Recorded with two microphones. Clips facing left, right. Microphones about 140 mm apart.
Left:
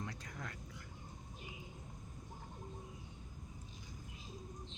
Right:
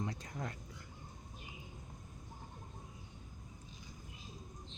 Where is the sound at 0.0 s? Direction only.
25° right (ahead or behind).